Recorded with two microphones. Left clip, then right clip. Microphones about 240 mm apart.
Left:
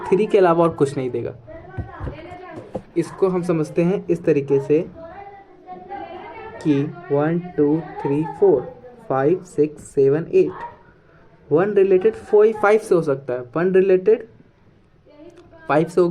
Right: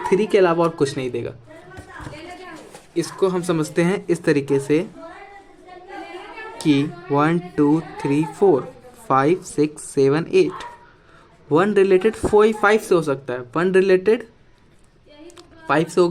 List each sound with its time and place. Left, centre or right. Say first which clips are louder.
0.0 s speech: left 1 dB; centre
3.2 s speech: even; right
6.6 s speech: right 1 dB; right
15.4 s a sound: left 1 dB; right